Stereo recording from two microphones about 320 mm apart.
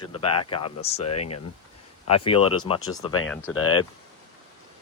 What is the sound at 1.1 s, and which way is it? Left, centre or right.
Speech, left.